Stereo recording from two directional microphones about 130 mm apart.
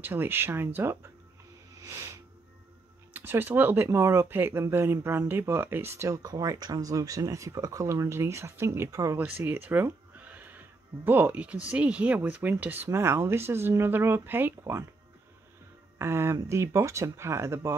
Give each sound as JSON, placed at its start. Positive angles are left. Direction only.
{"t": 0.0, "sound": "speech", "side_deg": -15}
{"t": 16.0, "sound": "speech", "side_deg": -20}